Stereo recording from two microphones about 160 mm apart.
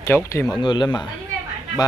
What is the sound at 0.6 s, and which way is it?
Speech, 30° left (ahead or behind).